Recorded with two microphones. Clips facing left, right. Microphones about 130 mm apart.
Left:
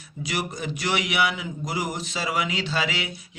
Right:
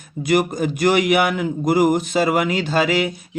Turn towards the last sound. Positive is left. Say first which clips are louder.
# right 9 dB
turn(degrees=-50)  # may be behind; listen again after turning